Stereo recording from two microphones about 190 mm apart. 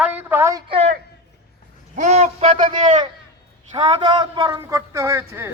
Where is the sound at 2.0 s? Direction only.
40° right (ahead or behind).